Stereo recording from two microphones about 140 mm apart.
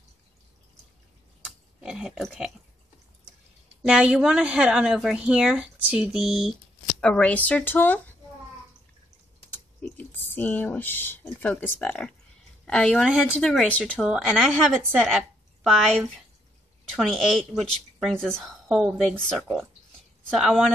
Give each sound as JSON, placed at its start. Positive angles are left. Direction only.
{"t": 1.4, "sound": "a sound", "side_deg": -5}
{"t": 3.8, "sound": "a woman's voice", "side_deg": -5}
{"t": 7.0, "sound": "speech", "side_deg": 10}
{"t": 9.5, "sound": "a woman's voice", "side_deg": 15}
{"t": 14.0, "sound": "a woman's voice", "side_deg": 0}